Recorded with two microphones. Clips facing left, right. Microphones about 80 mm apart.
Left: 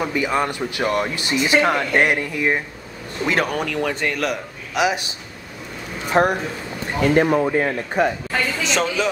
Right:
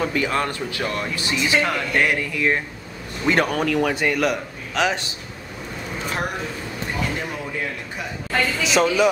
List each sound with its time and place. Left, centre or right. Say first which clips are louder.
0.0 s speech: left 1 dB; centre
3.3 s a man's voice: right 2 dB; centre
4.7 s speech: left 2 dB; centre
6.2 s speech: left 13 dB; left
8.3 s speech: even; centre